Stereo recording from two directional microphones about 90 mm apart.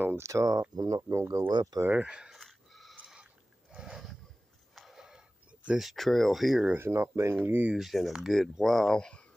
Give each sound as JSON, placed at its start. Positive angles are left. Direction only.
{"t": 0.0, "sound": "speech", "side_deg": -30}
{"t": 1.0, "sound": "speech", "side_deg": -30}
{"t": 1.5, "sound": "speech", "side_deg": -50}
{"t": 1.9, "sound": "a sound", "side_deg": -15}
{"t": 5.7, "sound": "speech", "side_deg": -5}
{"t": 6.7, "sound": "speech", "side_deg": -25}
{"t": 7.4, "sound": "speech", "side_deg": -20}
{"t": 7.7, "sound": "speech", "side_deg": 0}